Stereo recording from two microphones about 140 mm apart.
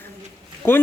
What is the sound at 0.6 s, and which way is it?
Speech, 15° left (ahead or behind).